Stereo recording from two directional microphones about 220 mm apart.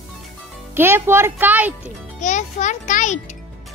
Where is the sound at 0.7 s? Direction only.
10° right (ahead or behind).